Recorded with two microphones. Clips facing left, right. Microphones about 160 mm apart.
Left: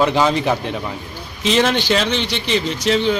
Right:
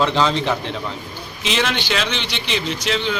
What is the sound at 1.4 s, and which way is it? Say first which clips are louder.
A man's voice: left 6 dB; 40° left (ahead or behind).